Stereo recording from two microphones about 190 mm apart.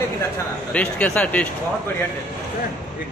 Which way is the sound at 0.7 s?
5° left (ahead or behind).